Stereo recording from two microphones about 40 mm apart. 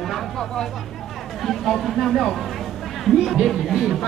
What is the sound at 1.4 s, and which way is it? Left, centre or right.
Speech, centre.